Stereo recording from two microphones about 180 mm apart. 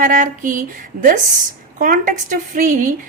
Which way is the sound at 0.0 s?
45° right (ahead or behind).